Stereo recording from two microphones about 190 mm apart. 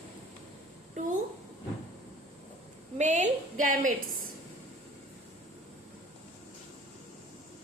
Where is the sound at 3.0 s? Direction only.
40° right (ahead or behind).